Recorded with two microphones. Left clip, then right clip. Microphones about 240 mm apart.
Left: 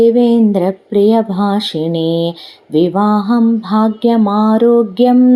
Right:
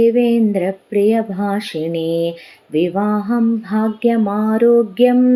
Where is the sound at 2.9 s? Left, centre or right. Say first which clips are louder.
Left 5 dB; centre.